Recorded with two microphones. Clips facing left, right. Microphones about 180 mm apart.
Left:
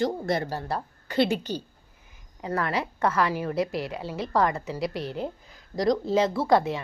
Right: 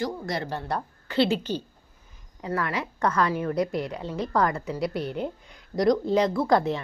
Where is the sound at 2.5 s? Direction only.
30° left (ahead or behind).